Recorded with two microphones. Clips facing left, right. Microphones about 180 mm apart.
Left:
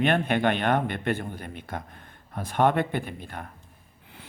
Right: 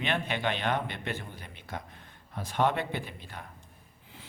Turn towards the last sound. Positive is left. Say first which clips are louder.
# left 6 dB
turn(degrees=55)  # may be behind; listen again after turning